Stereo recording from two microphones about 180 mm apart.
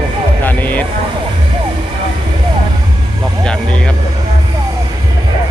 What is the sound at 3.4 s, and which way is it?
Vehicle, 5° left (ahead or behind).